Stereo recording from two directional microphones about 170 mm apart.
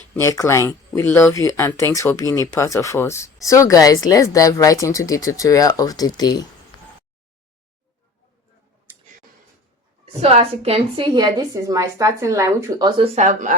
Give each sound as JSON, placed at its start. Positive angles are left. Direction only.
{"t": 0.2, "sound": "speech", "side_deg": 15}
{"t": 8.9, "sound": "clicking", "side_deg": -15}
{"t": 10.2, "sound": "a woman's voice", "side_deg": -40}
{"t": 13.0, "sound": "speech", "side_deg": -45}